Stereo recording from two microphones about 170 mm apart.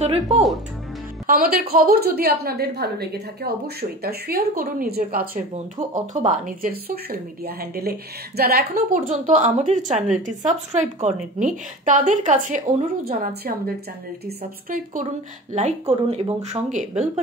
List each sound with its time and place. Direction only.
0.0 s speech: 40° right (ahead or behind)
1.2 s a woman's voice: 60° right (ahead or behind)
5.5 s a woman's voice: 45° right (ahead or behind)
15.5 s a woman's voice: 40° right (ahead or behind)